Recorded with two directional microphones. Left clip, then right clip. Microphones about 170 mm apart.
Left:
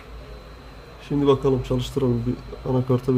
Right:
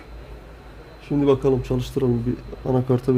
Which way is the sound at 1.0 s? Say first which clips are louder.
Right 1 dB; 15° right (ahead or behind).